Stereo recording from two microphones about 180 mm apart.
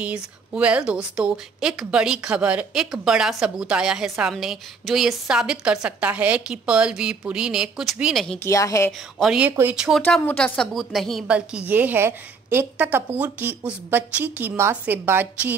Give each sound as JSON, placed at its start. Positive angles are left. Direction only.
{"t": 0.0, "sound": "a woman's voice", "side_deg": -5}
{"t": 8.5, "sound": "a woman's voice", "side_deg": 15}
{"t": 9.2, "sound": "a woman's voice", "side_deg": -5}